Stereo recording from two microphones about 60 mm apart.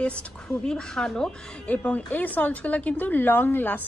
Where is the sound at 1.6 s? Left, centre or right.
Left.